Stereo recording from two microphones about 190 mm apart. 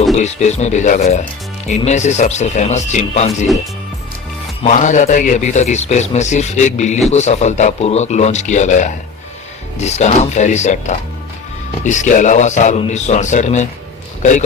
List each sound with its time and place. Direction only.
0.2 s a man's voice: 35° left (ahead or behind)
4.6 s a man's voice: 40° left (ahead or behind)